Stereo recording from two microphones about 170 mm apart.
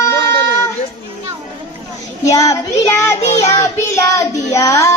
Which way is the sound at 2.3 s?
20° left (ahead or behind).